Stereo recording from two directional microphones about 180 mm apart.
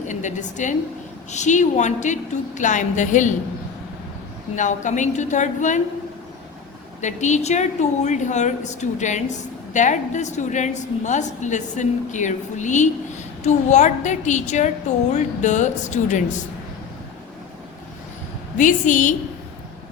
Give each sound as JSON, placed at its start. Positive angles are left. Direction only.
{"t": 0.1, "sound": "a woman's voice", "side_deg": 40}
{"t": 4.5, "sound": "a woman's voice", "side_deg": 45}
{"t": 7.0, "sound": "a woman's voice", "side_deg": 40}
{"t": 18.5, "sound": "a woman's voice", "side_deg": 45}